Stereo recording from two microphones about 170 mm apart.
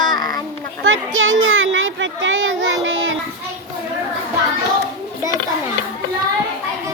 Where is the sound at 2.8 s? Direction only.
90° right.